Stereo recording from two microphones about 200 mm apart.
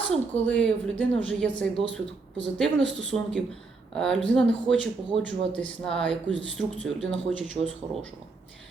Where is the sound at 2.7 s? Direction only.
65° right (ahead or behind).